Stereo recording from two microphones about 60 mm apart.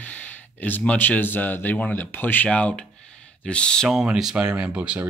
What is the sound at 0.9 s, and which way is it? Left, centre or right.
Speech, left.